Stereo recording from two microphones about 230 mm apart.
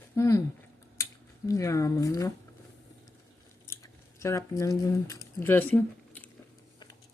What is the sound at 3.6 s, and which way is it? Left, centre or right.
Squish, centre.